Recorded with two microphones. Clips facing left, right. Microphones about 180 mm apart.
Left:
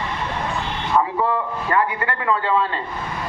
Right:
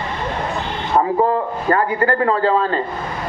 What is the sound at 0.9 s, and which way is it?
A man's voice, 40° right (ahead or behind).